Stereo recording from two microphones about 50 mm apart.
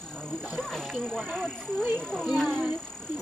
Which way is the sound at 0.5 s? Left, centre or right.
Centre.